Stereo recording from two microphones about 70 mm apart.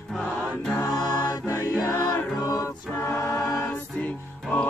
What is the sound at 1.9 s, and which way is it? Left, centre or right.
Music, centre.